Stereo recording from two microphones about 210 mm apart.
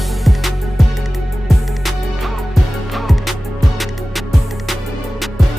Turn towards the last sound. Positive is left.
turn(degrees=0)  # may be behind; listen again after turning